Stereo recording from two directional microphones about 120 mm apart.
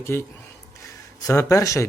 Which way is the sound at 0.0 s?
20° left (ahead or behind).